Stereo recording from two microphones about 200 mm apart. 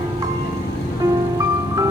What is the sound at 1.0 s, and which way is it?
Music, 15° right (ahead or behind).